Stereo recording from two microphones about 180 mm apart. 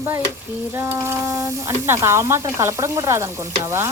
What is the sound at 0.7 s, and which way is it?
Speech, 15° right (ahead or behind).